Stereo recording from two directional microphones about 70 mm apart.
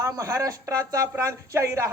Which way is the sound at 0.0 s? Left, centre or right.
Right.